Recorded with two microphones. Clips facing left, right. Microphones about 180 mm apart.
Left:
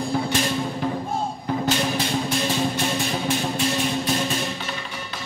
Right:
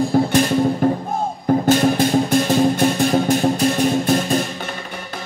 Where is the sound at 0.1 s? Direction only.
50° right (ahead or behind).